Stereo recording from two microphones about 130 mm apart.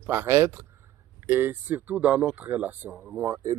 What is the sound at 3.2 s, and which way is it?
Speech, 25° right (ahead or behind).